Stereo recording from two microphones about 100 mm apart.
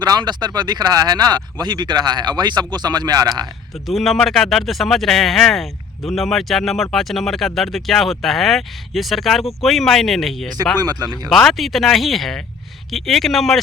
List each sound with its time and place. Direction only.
0.0 s speech: 45° right (ahead or behind)
3.8 s speech: centre (ahead or behind)
10.8 s speech: 40° right (ahead or behind)
11.3 s speech: centre (ahead or behind)